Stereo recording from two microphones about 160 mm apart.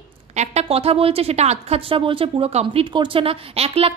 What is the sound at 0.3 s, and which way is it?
A woman's voice, 45° right (ahead or behind).